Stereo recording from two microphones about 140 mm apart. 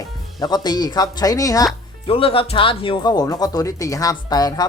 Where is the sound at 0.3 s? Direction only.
30° left (ahead or behind).